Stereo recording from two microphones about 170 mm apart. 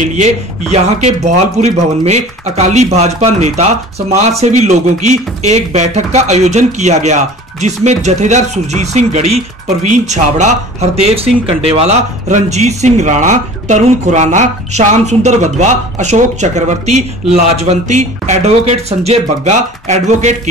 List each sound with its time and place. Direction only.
0.0 s speech: 45° right (ahead or behind)